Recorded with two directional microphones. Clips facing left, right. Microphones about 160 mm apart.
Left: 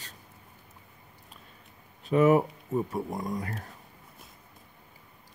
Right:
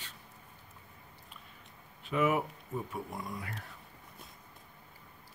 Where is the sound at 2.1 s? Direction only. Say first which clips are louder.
Left 8 dB; 40° left (ahead or behind).